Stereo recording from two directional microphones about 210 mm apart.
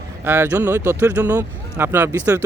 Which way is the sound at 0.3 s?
10° right (ahead or behind).